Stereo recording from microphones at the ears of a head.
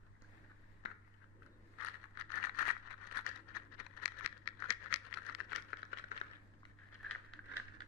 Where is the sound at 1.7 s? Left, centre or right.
Left.